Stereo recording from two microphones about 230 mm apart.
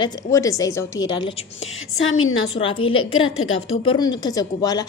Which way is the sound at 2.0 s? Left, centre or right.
Left.